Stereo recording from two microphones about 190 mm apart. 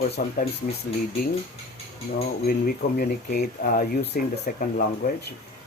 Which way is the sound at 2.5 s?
50° left (ahead or behind).